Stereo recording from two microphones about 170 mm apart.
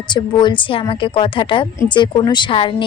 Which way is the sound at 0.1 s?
25° left (ahead or behind).